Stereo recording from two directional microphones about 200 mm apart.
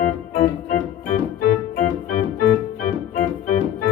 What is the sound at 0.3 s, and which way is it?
Organ, 40° left (ahead or behind).